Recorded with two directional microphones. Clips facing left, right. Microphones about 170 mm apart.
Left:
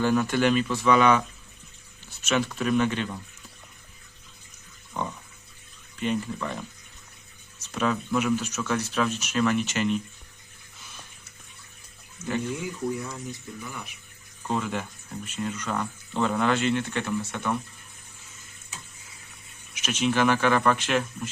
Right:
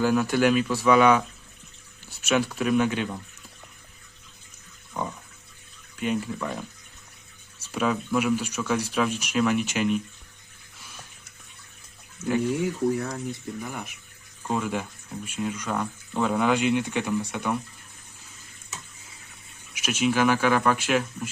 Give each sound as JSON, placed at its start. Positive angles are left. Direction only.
{"t": 0.0, "sound": "speech", "side_deg": -5}
{"t": 6.0, "sound": "speech", "side_deg": -5}
{"t": 12.6, "sound": "speech", "side_deg": -70}
{"t": 13.6, "sound": "speech", "side_deg": -50}
{"t": 14.4, "sound": "speech", "side_deg": -5}
{"t": 19.7, "sound": "speech", "side_deg": -10}